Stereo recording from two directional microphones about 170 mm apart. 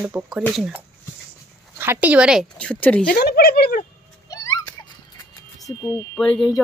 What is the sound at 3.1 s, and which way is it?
Speech, 70° left (ahead or behind).